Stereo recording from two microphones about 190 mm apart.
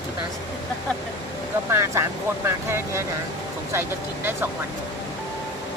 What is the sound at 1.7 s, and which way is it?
Speech, 15° right (ahead or behind).